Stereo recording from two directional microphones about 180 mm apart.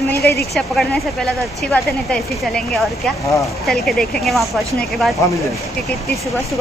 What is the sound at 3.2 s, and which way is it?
Speech, 15° left (ahead or behind).